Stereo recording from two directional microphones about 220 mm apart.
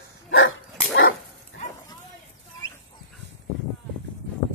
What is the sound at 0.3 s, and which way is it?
Dog, 60° left (ahead or behind).